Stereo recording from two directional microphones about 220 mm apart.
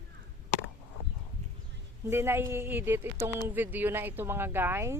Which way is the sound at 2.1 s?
10° right (ahead or behind).